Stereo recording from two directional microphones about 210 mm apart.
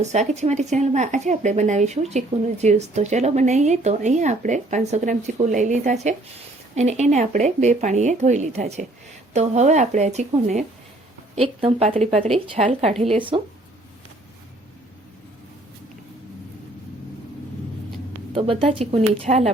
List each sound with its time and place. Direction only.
0.0 s speech: 35° right (ahead or behind)
18.3 s speech: 25° right (ahead or behind)